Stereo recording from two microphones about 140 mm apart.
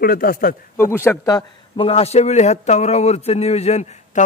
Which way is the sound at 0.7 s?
15° left (ahead or behind).